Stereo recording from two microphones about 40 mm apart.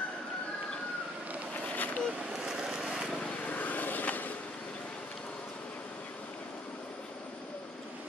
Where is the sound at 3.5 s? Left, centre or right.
Left.